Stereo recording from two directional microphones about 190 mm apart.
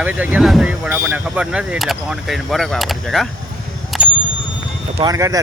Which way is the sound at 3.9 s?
Centre (ahead or behind).